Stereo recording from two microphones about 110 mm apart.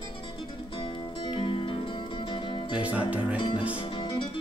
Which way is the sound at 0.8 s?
45° left (ahead or behind).